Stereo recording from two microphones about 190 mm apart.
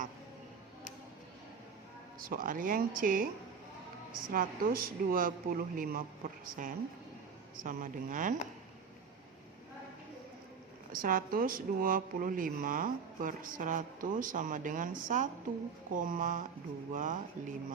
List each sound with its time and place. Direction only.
2.2 s speech: 50° right (ahead or behind)
4.3 s speech: 50° right (ahead or behind)
10.9 s speech: 50° right (ahead or behind)